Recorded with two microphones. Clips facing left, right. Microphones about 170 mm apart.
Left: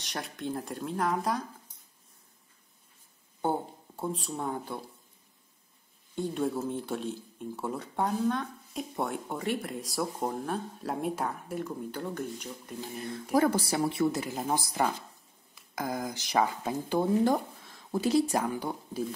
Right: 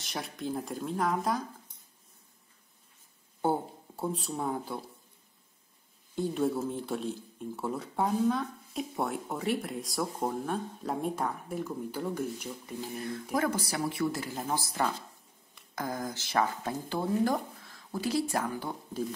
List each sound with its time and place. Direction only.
0.0 s speech: centre (ahead or behind)
3.4 s speech: 5° right (ahead or behind)
6.1 s speech: centre (ahead or behind)
13.4 s speech: 30° left (ahead or behind)
18.4 s speech: 10° left (ahead or behind)